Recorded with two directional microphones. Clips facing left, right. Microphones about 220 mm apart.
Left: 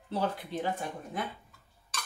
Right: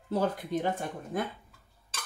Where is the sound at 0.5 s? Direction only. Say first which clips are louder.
Right 4 dB; 45° right (ahead or behind).